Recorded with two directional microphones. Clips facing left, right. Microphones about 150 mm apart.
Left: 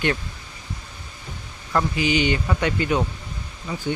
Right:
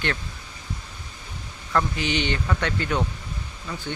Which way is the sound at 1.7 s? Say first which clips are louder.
Left 3 dB; 10° left (ahead or behind).